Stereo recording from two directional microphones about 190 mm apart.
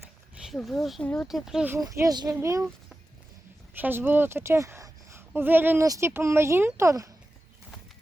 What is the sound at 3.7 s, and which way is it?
A woman's voice, 10° right (ahead or behind).